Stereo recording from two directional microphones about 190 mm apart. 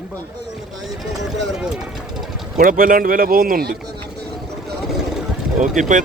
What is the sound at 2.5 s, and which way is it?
Speech, 50° right (ahead or behind).